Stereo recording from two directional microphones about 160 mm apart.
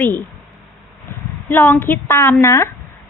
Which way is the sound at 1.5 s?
15° left (ahead or behind).